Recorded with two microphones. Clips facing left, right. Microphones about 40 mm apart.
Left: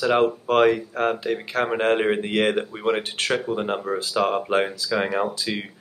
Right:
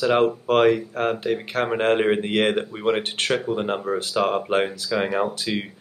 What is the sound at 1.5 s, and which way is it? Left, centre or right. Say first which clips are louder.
Speech: left 1 dB; right.